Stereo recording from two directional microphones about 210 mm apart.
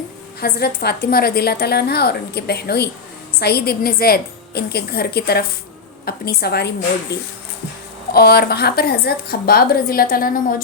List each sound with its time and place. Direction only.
0.3 s a woman's voice: 50° left (ahead or behind)